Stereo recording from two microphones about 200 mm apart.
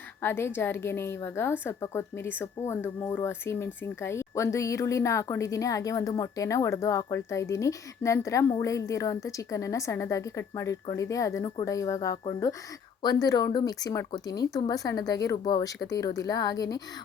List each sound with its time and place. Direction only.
0.2 s speech: 10° left (ahead or behind)